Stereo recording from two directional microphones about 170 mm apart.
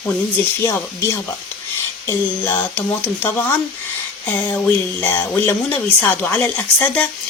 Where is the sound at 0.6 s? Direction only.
15° left (ahead or behind).